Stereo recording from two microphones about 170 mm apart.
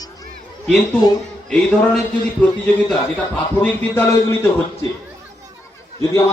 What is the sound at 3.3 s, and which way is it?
A man's voice, 10° left (ahead or behind).